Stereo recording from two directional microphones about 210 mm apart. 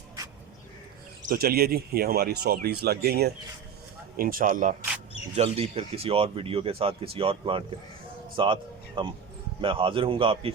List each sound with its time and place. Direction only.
1.2 s speech: 45° right (ahead or behind); by 10.5 s 25° right (ahead or behind)